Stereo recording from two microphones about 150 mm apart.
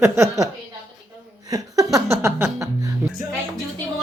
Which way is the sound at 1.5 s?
25° right (ahead or behind).